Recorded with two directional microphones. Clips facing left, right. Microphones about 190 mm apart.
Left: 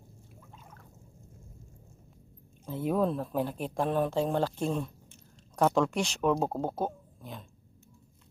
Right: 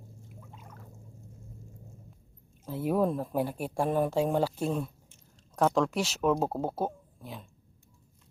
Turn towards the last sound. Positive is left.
turn(degrees=-5)  # may be behind; listen again after turning